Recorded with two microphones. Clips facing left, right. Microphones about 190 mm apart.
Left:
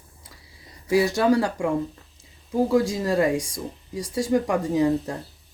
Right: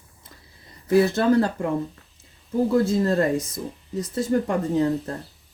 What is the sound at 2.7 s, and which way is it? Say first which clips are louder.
Speech: right 2 dB; 10° left (ahead or behind).